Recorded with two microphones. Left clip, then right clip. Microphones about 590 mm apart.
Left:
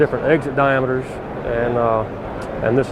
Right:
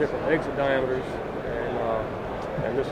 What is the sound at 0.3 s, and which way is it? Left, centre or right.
Speech, left.